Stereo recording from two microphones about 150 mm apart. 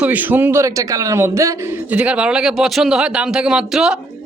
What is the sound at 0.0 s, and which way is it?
A man's voice, 10° right (ahead or behind).